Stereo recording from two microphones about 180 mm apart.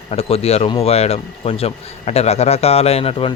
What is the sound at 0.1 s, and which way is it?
Speech, 35° left (ahead or behind).